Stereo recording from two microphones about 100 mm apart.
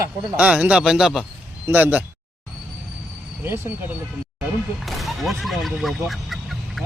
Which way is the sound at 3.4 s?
25° right (ahead or behind).